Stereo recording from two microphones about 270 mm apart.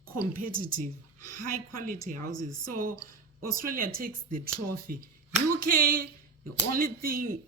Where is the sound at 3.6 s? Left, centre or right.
Right.